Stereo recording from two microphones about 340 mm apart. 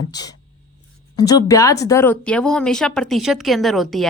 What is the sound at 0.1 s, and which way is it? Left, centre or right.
Speech, centre.